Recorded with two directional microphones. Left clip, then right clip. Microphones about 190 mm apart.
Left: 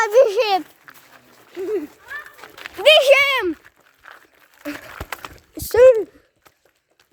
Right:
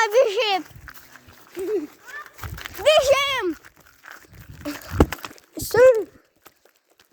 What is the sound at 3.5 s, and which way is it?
Dog, 60° right (ahead or behind).